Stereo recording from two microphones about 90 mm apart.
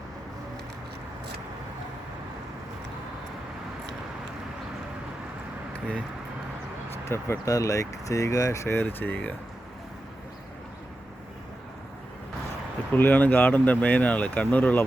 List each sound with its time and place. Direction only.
7.1 s speech: 35° left (ahead or behind); by 9.3 s 20° left (ahead or behind)
12.9 s speech: 20° left (ahead or behind)